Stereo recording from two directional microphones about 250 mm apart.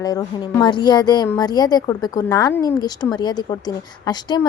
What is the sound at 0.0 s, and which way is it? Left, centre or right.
A woman's voice, centre.